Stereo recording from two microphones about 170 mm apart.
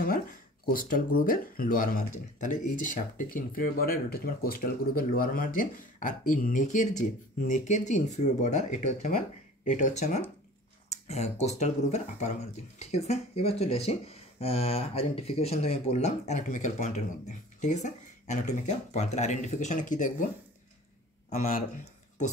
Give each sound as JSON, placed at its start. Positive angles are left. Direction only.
{"t": 0.0, "sound": "speech", "side_deg": 55}
{"t": 21.3, "sound": "speech", "side_deg": 55}